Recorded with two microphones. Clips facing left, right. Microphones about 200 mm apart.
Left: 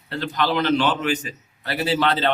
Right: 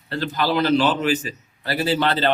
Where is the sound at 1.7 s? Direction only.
Centre (ahead or behind).